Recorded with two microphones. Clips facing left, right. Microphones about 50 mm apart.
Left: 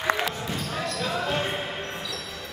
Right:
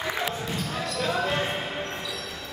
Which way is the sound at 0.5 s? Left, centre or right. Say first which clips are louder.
Even; centre.